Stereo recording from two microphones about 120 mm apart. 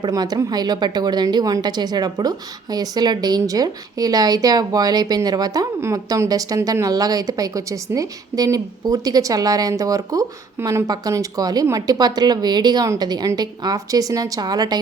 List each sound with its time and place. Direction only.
0.0 s a woman's voice: 35° right (ahead or behind)